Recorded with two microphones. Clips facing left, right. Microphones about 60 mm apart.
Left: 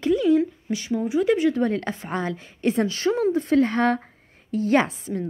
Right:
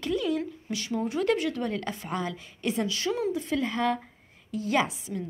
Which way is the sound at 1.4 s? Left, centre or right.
Left.